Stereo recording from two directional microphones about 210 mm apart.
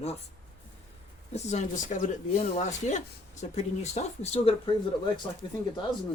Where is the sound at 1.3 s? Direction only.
35° left (ahead or behind).